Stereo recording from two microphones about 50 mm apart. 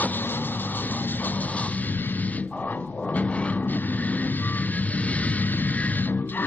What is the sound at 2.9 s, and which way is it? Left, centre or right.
Vehicle, left.